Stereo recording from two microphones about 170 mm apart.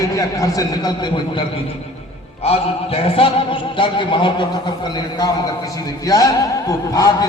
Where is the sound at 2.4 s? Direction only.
35° left (ahead or behind).